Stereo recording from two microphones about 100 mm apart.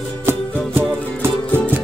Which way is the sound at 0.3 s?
25° right (ahead or behind).